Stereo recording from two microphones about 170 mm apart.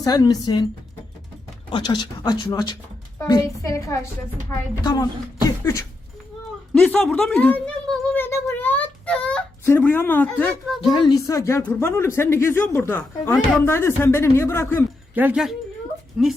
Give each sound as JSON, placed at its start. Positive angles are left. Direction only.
{"t": 0.0, "sound": "speech", "side_deg": 20}
{"t": 1.7, "sound": "a woman's voice", "side_deg": 25}
{"t": 6.7, "sound": "speech", "side_deg": 5}
{"t": 10.8, "sound": "a woman's voice", "side_deg": 30}
{"t": 15.1, "sound": "speech", "side_deg": -10}